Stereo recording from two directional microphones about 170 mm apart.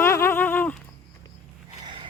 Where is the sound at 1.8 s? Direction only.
30° right (ahead or behind).